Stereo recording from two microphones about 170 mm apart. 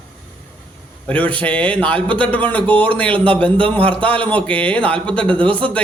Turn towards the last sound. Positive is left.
turn(degrees=5)  # may be behind; listen again after turning